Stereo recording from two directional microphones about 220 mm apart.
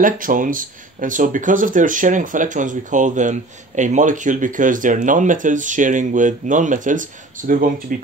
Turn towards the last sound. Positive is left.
turn(degrees=-40)  # may be behind; listen again after turning